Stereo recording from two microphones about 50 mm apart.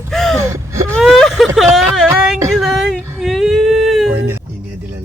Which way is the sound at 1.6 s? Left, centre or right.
Centre.